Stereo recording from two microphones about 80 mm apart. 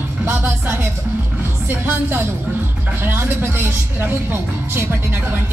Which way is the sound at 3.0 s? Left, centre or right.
Right.